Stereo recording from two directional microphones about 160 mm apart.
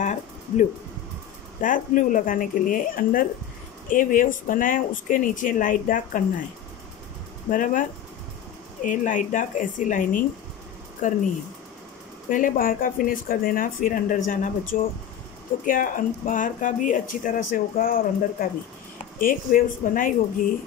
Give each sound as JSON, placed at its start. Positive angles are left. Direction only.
{"t": 0.0, "sound": "a sound", "side_deg": 50}
{"t": 1.6, "sound": "speech", "side_deg": 55}
{"t": 7.4, "sound": "speech", "side_deg": 55}
{"t": 8.8, "sound": "speech", "side_deg": 55}
{"t": 12.3, "sound": "speech", "side_deg": 55}